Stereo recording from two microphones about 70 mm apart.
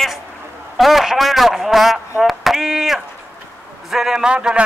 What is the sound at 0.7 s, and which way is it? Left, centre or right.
A man's voice, centre.